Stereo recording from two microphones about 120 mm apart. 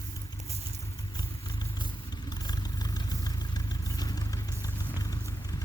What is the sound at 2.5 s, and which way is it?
Vehicle, 35° left (ahead or behind).